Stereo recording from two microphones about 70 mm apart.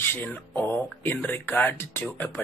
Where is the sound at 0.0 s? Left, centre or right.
Left.